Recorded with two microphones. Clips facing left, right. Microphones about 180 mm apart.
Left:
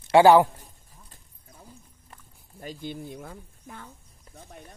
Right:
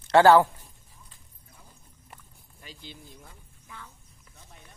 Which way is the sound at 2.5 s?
50° left (ahead or behind).